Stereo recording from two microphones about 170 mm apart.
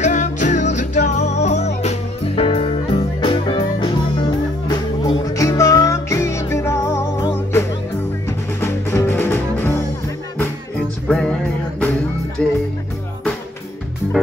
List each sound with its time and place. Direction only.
0.0 s music: 45° left (ahead or behind); by 7.2 s 15° left (ahead or behind)
8.3 s music: 15° left (ahead or behind)
11.1 s music: 5° left (ahead or behind)
12.4 s music: 5° left (ahead or behind)